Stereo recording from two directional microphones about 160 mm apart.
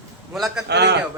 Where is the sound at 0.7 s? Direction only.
90° right.